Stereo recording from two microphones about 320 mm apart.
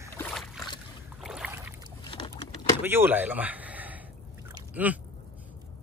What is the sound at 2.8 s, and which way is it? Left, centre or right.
Speech, centre.